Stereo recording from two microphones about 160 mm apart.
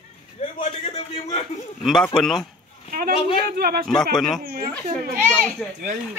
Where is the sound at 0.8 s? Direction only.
35° left (ahead or behind).